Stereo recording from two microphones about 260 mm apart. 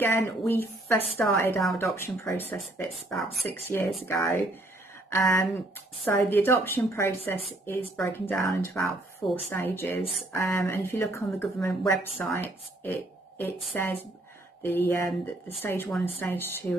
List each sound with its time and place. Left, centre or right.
0.0 s speech: centre